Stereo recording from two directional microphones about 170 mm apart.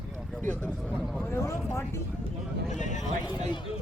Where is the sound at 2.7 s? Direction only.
45° left (ahead or behind).